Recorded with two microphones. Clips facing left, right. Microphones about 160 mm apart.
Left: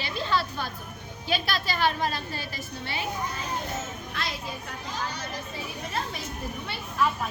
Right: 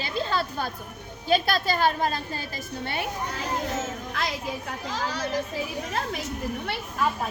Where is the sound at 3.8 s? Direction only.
90° right.